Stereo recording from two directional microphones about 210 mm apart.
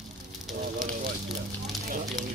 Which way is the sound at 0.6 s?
40° right (ahead or behind).